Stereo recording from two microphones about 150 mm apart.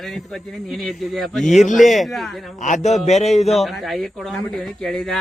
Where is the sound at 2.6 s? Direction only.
50° left (ahead or behind).